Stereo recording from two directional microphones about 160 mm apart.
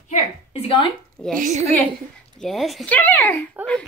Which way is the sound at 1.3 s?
50° right (ahead or behind).